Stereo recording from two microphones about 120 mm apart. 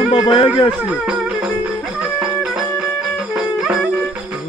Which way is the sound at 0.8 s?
5° right (ahead or behind).